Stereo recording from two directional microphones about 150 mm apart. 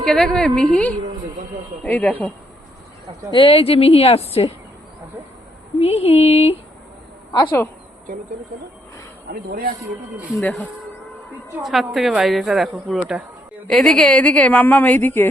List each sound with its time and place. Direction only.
0.0 s a woman's voice: 5° left (ahead or behind)
3.3 s a woman's voice: 40° left (ahead or behind)
5.8 s speech: 45° left (ahead or behind)
9.3 s speech: 75° right (ahead or behind)
11.6 s a woman's voice: centre (ahead or behind)